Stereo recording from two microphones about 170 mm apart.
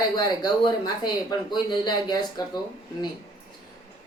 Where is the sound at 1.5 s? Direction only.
25° left (ahead or behind).